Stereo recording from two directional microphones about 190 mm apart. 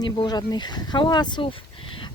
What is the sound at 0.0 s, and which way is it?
A woman's voice, 20° left (ahead or behind).